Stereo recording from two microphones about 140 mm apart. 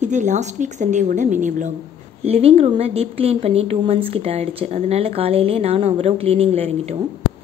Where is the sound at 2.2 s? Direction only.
45° right (ahead or behind).